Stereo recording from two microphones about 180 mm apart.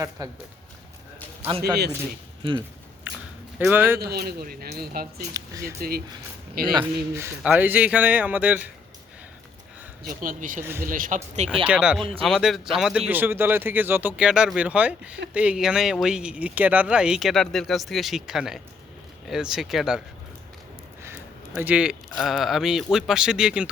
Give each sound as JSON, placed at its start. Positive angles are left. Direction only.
{"t": 0.2, "sound": "speech", "side_deg": -20}
{"t": 1.4, "sound": "a man's voice", "side_deg": -35}
{"t": 3.6, "sound": "speech", "side_deg": -10}
{"t": 4.0, "sound": "speech", "side_deg": -60}
{"t": 5.3, "sound": "speech", "side_deg": -20}
{"t": 6.6, "sound": "speech", "side_deg": -55}
{"t": 7.1, "sound": "speech", "side_deg": -15}
{"t": 10.0, "sound": "speech", "side_deg": -50}
{"t": 10.6, "sound": "speech", "side_deg": -15}
{"t": 10.8, "sound": "speech", "side_deg": -50}
{"t": 11.6, "sound": "speech", "side_deg": -5}
{"t": 21.0, "sound": "speech", "side_deg": -10}